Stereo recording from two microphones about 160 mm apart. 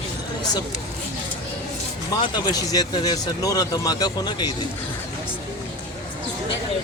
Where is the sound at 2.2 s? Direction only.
25° left (ahead or behind).